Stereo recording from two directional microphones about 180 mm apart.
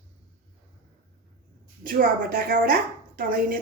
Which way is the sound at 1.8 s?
50° right (ahead or behind).